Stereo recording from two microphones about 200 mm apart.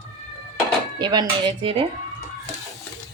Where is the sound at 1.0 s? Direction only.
20° right (ahead or behind).